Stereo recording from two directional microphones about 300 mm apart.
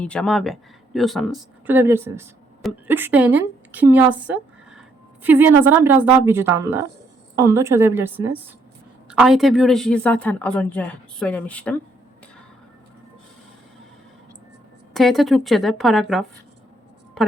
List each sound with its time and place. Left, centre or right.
0.0 s speech: centre
5.2 s a woman's voice: centre
14.9 s speech: centre